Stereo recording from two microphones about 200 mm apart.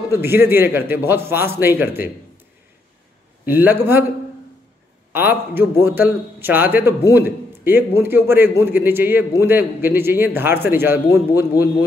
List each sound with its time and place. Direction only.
0.1 s a man's voice: 10° right (ahead or behind)
3.4 s a man's voice: 10° right (ahead or behind)
5.1 s a man's voice: 10° right (ahead or behind)